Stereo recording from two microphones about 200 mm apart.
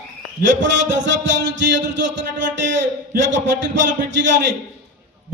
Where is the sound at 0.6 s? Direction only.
65° right (ahead or behind).